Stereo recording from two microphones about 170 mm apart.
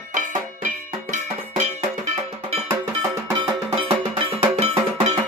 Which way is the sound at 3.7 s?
30° right (ahead or behind).